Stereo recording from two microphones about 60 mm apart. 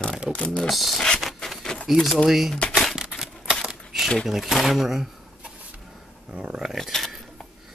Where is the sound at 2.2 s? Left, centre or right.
Centre.